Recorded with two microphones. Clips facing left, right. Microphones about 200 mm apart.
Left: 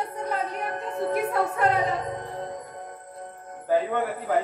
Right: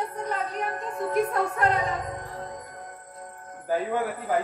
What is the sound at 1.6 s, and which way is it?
Music, 25° left (ahead or behind).